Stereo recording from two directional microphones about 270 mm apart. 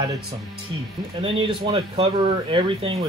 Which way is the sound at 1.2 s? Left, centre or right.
Centre.